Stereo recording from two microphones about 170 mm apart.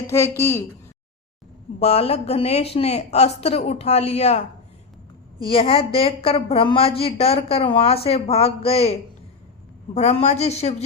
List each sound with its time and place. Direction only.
0.1 s a woman's voice: 15° left (ahead or behind)
1.8 s a woman's voice: 35° left (ahead or behind)